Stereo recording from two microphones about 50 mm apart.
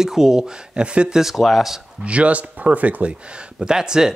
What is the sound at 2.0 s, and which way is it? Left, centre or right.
Speech, right.